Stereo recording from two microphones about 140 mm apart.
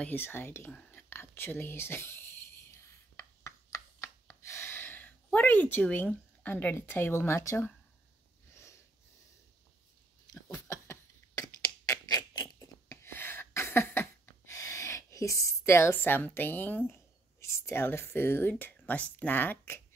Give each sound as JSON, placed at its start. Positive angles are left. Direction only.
{"t": 0.0, "sound": "whispering", "side_deg": 15}
{"t": 10.2, "sound": "a sound", "side_deg": 25}
{"t": 17.4, "sound": "speech", "side_deg": 20}